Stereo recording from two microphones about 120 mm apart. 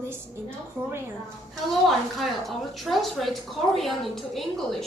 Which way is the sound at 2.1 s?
Centre (ahead or behind).